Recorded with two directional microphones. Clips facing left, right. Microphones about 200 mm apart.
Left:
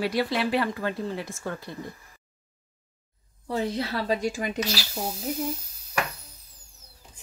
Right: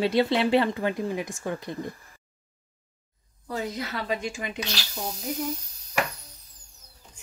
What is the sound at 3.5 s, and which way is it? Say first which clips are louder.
Speech: left 4 dB; 30° left (ahead or behind).